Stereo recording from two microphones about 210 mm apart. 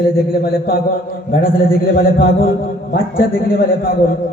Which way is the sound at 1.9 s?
45° left (ahead or behind).